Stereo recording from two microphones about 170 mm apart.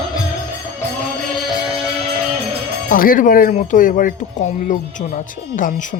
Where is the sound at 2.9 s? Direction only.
55° left (ahead or behind).